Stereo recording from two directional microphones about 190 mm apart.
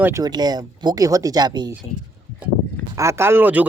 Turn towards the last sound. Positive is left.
turn(degrees=-10)  # may be behind; listen again after turning